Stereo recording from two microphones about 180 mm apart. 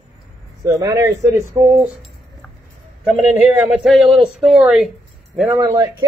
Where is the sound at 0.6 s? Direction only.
20° right (ahead or behind).